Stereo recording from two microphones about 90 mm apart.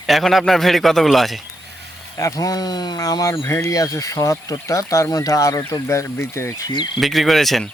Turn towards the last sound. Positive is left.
turn(degrees=0)  # may be behind; listen again after turning